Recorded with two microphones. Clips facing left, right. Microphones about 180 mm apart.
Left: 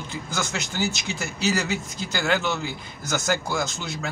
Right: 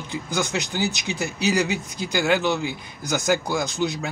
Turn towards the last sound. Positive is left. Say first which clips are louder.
# right 4 dB
turn(degrees=-15)  # may be behind; listen again after turning